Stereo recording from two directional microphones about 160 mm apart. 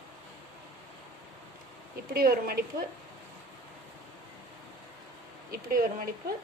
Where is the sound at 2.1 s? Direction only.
65° right (ahead or behind).